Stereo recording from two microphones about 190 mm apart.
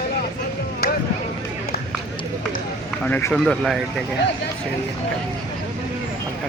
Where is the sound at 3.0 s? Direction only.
10° left (ahead or behind).